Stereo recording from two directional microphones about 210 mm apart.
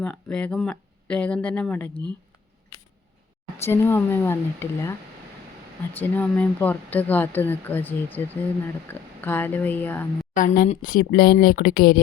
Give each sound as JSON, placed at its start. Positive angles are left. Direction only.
{"t": 0.0, "sound": "speech", "side_deg": 5}
{"t": 3.6, "sound": "speech", "side_deg": 10}
{"t": 6.0, "sound": "speech", "side_deg": 5}
{"t": 10.3, "sound": "a woman's voice", "side_deg": 40}